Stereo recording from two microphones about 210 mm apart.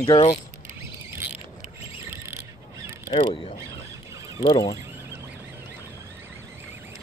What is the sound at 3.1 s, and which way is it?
Speech, 25° left (ahead or behind).